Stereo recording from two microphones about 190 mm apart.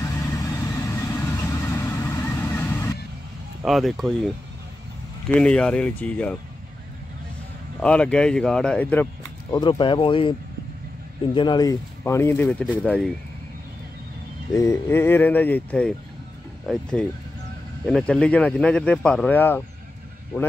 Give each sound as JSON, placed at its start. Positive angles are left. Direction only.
{"t": 0.0, "sound": "vehicle", "side_deg": 15}
{"t": 3.6, "sound": "speech", "side_deg": 0}
{"t": 5.3, "sound": "speech", "side_deg": 5}
{"t": 7.8, "sound": "speech", "side_deg": 5}
{"t": 9.5, "sound": "speech", "side_deg": 25}
{"t": 11.3, "sound": "speech", "side_deg": 20}
{"t": 14.5, "sound": "speech", "side_deg": 15}
{"t": 17.8, "sound": "speech", "side_deg": 5}